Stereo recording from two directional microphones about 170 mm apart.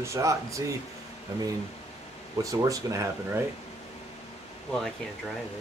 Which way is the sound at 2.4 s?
20° right (ahead or behind).